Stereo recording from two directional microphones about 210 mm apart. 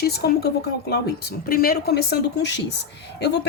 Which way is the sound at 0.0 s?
50° left (ahead or behind).